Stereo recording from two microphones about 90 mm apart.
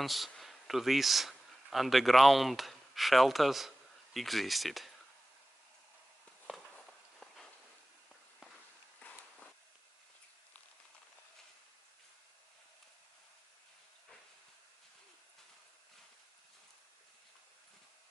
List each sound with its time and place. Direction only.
0.0 s speech: centre (ahead or behind)
9.0 s walk: 15° left (ahead or behind)